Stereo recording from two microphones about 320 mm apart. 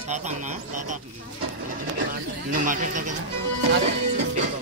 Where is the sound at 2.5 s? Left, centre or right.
Right.